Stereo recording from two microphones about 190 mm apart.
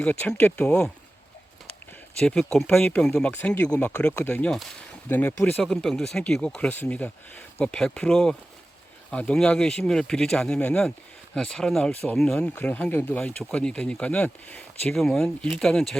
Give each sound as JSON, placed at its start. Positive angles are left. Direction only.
{"t": 0.0, "sound": "speech", "side_deg": 5}
{"t": 2.2, "sound": "speech", "side_deg": 5}